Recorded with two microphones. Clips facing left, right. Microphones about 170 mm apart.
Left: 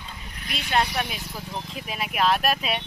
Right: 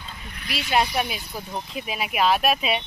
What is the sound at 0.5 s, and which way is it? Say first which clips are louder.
Speech: right 2 dB; 5° right (ahead or behind).